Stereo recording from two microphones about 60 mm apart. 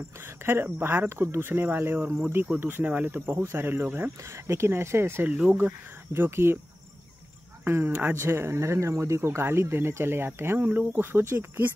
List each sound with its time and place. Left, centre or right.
0.4 s speech: right
4.2 s speech: right
7.6 s speech: right